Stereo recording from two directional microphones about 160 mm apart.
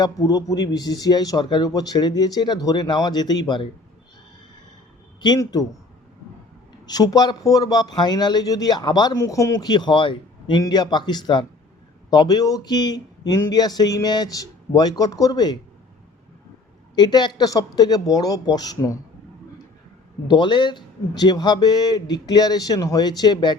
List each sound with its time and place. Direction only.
0.0 s speech: 25° left (ahead or behind)
5.2 s speech: 25° left (ahead or behind)
6.8 s speech: 25° left (ahead or behind)
16.9 s speech: 25° left (ahead or behind)
20.2 s speech: 30° left (ahead or behind)